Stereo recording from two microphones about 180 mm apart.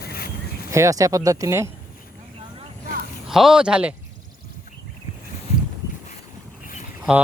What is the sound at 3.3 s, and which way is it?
Speech, centre (ahead or behind).